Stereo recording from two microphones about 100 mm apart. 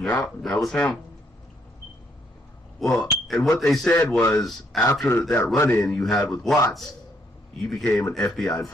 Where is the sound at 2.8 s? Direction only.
Centre (ahead or behind).